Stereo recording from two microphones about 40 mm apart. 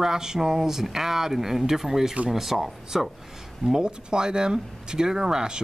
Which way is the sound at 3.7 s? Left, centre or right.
Centre.